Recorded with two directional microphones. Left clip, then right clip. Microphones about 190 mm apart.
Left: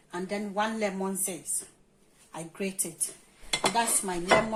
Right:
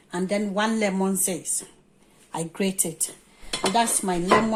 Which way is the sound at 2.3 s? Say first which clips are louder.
Right 8 dB; 50° right (ahead or behind).